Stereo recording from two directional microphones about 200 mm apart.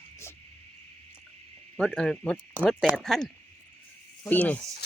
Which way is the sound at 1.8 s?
5° left (ahead or behind).